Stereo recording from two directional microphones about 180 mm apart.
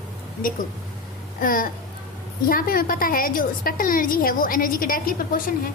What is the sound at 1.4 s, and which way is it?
A woman's voice, 50° left (ahead or behind).